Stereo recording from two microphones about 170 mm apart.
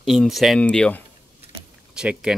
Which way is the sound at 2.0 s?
5° right (ahead or behind).